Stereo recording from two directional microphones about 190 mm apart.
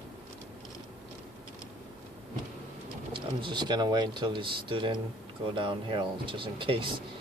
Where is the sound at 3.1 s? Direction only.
25° right (ahead or behind).